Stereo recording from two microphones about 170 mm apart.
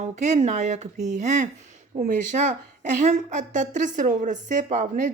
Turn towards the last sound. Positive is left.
turn(degrees=-45)  # may be behind; listen again after turning